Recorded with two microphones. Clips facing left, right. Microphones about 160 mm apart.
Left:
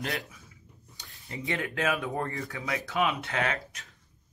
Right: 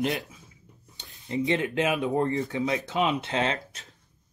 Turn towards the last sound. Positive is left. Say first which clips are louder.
# right 3 dB
turn(degrees=-25)  # may be behind; listen again after turning